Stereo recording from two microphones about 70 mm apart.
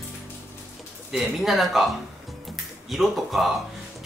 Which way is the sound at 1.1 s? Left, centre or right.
Centre.